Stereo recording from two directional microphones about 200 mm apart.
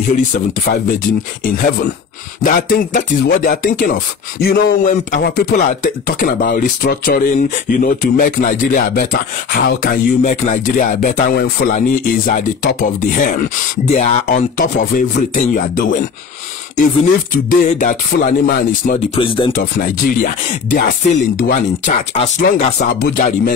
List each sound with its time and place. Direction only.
0.7 s speech: 45° left (ahead or behind)
17.5 s speech: 40° left (ahead or behind)
19.1 s speech: 25° left (ahead or behind)
20.7 s speech: 45° left (ahead or behind)
22.9 s speech: 50° left (ahead or behind)